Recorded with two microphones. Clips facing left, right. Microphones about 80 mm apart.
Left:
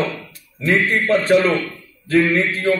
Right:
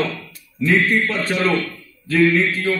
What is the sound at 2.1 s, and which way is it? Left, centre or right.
Speech, left.